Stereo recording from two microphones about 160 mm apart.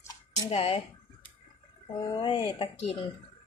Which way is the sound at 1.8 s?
30° left (ahead or behind).